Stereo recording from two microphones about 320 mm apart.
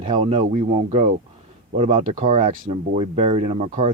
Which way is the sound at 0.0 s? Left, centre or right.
Centre.